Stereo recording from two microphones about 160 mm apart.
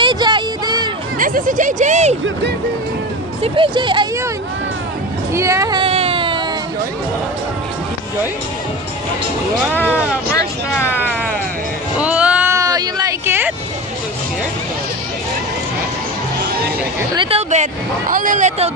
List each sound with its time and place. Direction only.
0.0 s a sound: 30° right (ahead or behind)
1.1 s speech: 55° right (ahead or behind)
3.4 s speech: 35° right (ahead or behind)
5.3 s speech: 20° right (ahead or behind)
5.8 s a sound: 35° right (ahead or behind)
10.3 s speech: 15° left (ahead or behind)
12.0 s music: 10° right (ahead or behind)
12.5 s a sound: 20° right (ahead or behind)
17.3 s speech: 45° right (ahead or behind)
18.1 s speech: 55° right (ahead or behind)